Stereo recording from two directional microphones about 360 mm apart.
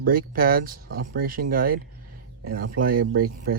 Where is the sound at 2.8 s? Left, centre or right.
Right.